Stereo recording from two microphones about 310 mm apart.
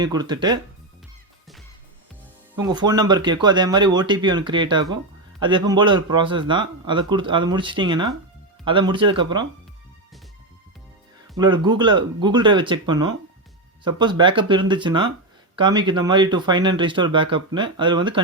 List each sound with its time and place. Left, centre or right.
0.0 s a man's voice: centre
2.6 s a man's voice: centre
11.3 s a man's voice: centre